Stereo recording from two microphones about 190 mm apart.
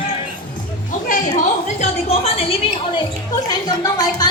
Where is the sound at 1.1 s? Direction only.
40° left (ahead or behind).